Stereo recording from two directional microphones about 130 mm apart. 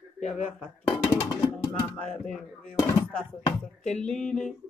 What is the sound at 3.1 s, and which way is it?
Speech, 10° left (ahead or behind).